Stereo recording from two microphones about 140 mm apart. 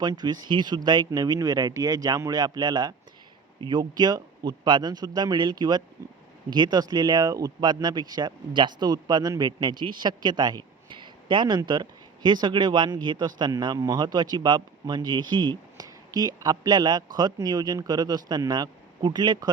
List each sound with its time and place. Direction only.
0.0 s speech: 30° right (ahead or behind)